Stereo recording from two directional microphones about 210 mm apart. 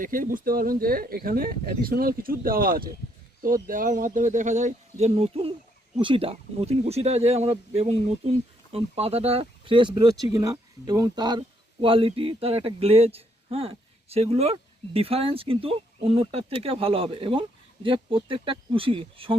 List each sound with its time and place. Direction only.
0.0 s speech: 40° right (ahead or behind)